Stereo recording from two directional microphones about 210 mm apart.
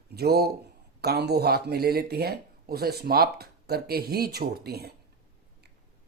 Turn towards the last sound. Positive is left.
turn(degrees=-50)  # may be behind; listen again after turning